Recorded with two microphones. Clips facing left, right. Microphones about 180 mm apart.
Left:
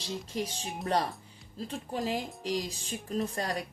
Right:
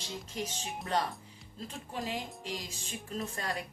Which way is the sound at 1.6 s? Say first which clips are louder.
Left 5 dB; 40° left (ahead or behind).